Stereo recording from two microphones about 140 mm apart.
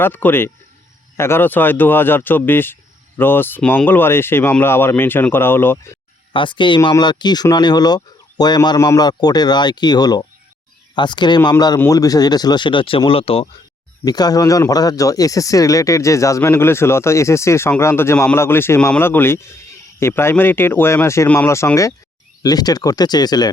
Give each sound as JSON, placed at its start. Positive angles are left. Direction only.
{"t": 0.0, "sound": "speech", "side_deg": 15}
{"t": 6.3, "sound": "speech", "side_deg": 35}
{"t": 14.0, "sound": "speech", "side_deg": 30}